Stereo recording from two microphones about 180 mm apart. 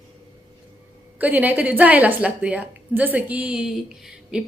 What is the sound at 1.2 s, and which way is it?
A woman's voice, 10° right (ahead or behind).